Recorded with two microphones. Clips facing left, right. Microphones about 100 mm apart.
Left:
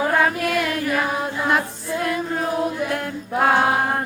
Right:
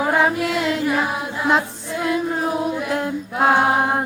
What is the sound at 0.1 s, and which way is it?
Music, 20° right (ahead or behind).